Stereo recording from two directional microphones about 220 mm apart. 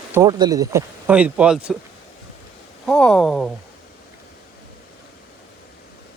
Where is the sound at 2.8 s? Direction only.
5° left (ahead or behind).